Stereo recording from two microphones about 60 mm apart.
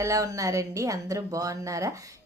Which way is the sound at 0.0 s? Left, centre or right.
Right.